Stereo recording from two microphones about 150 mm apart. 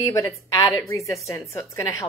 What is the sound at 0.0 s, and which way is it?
A woman's voice, 20° left (ahead or behind).